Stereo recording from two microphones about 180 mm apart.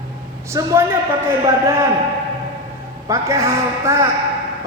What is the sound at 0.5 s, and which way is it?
Speech, 15° right (ahead or behind).